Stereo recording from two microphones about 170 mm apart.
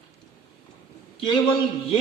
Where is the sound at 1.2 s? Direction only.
30° left (ahead or behind).